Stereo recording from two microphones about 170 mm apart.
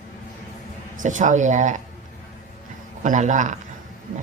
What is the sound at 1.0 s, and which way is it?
Speech, 45° right (ahead or behind).